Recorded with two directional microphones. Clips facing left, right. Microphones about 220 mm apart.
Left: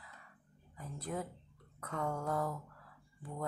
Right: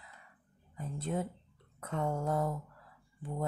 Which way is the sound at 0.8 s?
25° right (ahead or behind).